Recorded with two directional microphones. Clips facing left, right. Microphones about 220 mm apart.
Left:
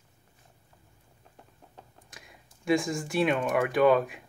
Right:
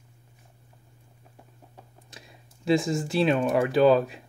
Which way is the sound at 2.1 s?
30° right (ahead or behind).